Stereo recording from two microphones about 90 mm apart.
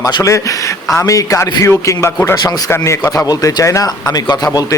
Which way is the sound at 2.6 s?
30° left (ahead or behind).